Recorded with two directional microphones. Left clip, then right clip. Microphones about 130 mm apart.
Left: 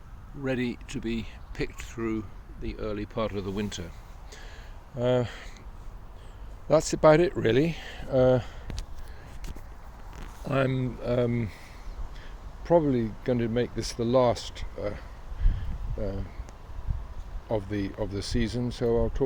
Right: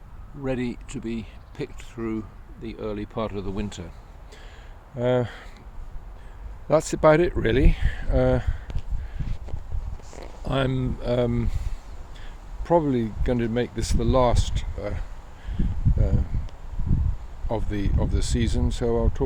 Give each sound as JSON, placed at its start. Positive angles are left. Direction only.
{"t": 0.4, "sound": "speech", "side_deg": -10}
{"t": 2.0, "sound": "speech", "side_deg": -15}
{"t": 4.9, "sound": "speech", "side_deg": -25}
{"t": 6.7, "sound": "speech", "side_deg": -25}
{"t": 10.4, "sound": "speech", "side_deg": -20}
{"t": 12.6, "sound": "speech", "side_deg": -25}
{"t": 17.5, "sound": "speech", "side_deg": -20}